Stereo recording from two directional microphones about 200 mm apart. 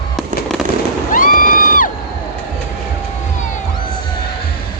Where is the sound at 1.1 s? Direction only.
45° left (ahead or behind).